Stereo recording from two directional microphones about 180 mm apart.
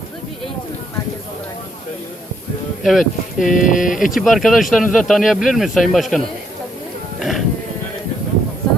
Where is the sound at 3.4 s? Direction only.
45° left (ahead or behind).